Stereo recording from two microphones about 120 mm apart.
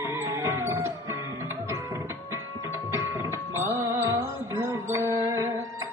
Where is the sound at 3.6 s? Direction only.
20° right (ahead or behind).